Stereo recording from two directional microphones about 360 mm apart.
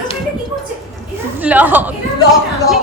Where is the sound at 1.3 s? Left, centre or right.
Centre.